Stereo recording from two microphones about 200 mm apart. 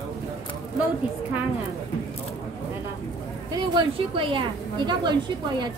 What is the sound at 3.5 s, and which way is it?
A woman's voice, 25° right (ahead or behind).